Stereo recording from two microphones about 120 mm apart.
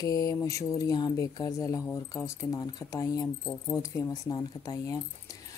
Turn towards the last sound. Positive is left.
turn(degrees=30)  # may be behind; listen again after turning